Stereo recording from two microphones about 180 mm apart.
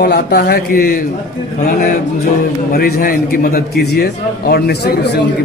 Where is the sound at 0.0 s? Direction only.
60° left (ahead or behind).